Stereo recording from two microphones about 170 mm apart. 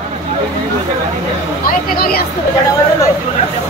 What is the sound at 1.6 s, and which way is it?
Speech, 60° left (ahead or behind).